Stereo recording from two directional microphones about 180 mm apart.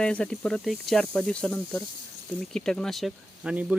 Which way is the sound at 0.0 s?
5° left (ahead or behind).